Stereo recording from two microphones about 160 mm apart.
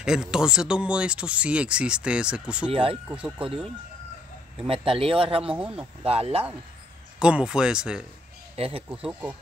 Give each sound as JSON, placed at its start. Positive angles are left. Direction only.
{"t": 0.0, "sound": "speech", "side_deg": -5}
{"t": 2.7, "sound": "speech", "side_deg": -35}
{"t": 3.1, "sound": "speech", "side_deg": -10}
{"t": 4.6, "sound": "speech", "side_deg": -35}
{"t": 5.4, "sound": "speech", "side_deg": -5}
{"t": 6.0, "sound": "speech", "side_deg": -40}
{"t": 7.2, "sound": "speech", "side_deg": -5}
{"t": 8.5, "sound": "speech", "side_deg": -35}
{"t": 9.0, "sound": "speech", "side_deg": -5}